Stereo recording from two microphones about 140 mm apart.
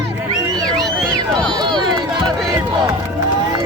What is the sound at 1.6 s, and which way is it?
Speech, 30° right (ahead or behind).